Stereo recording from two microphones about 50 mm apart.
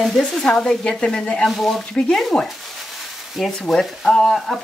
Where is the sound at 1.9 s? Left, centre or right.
Centre.